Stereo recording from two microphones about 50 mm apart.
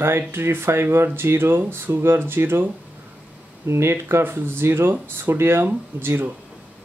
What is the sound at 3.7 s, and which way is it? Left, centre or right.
Speech, right.